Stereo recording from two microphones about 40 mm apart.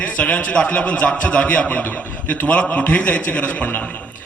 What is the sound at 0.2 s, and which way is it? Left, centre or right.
A man's voice, left.